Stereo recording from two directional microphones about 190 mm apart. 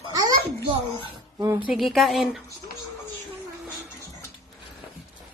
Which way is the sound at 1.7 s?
Centre (ahead or behind).